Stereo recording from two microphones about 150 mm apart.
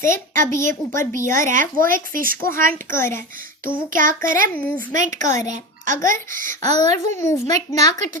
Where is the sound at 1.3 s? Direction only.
60° right (ahead or behind).